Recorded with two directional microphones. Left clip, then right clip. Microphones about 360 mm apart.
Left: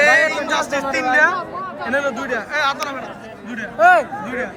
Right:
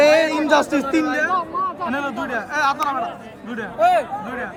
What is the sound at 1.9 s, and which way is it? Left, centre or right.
Speech, centre.